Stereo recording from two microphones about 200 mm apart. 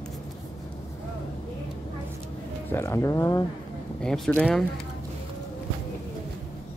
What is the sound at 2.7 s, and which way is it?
Speech, 15° left (ahead or behind).